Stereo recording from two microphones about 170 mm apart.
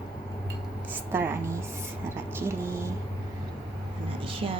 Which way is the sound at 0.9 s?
10° right (ahead or behind).